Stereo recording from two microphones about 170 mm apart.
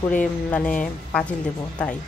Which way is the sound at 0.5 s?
5° left (ahead or behind).